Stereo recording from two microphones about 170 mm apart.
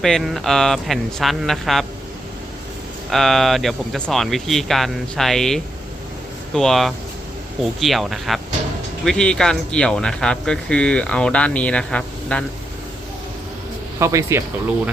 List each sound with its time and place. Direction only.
0.0 s speech: centre (ahead or behind)
3.1 s speech: centre (ahead or behind)
14.0 s speech: 15° right (ahead or behind)